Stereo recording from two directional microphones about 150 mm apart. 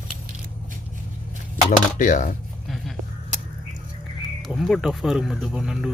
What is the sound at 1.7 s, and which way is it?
Speech, 60° left (ahead or behind).